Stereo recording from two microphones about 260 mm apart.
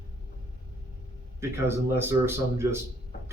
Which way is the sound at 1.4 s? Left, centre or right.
Centre.